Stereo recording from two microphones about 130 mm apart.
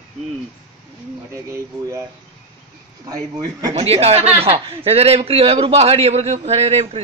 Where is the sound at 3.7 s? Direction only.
50° right (ahead or behind).